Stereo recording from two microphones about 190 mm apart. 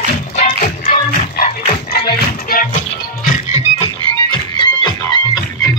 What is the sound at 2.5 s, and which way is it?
Music, 50° left (ahead or behind).